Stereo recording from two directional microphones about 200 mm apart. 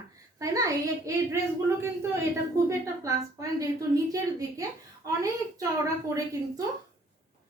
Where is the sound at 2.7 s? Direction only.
15° right (ahead or behind).